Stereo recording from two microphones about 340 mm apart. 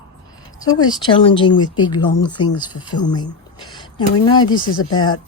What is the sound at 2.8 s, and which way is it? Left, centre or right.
A woman's voice, centre.